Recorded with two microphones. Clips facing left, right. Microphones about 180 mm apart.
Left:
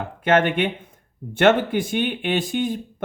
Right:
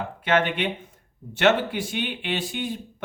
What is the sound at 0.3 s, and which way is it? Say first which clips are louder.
Speech: left 4 dB; 50° left (ahead or behind).